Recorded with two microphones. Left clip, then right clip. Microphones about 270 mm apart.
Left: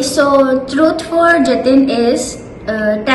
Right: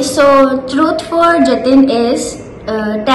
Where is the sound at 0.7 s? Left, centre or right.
Centre.